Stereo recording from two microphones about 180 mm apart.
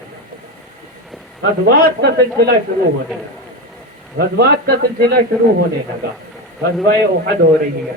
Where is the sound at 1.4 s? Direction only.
60° right (ahead or behind).